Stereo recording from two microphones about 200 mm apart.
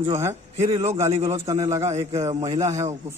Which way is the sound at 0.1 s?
15° right (ahead or behind).